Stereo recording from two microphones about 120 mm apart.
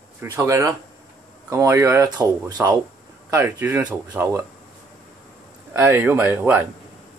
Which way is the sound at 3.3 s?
20° right (ahead or behind).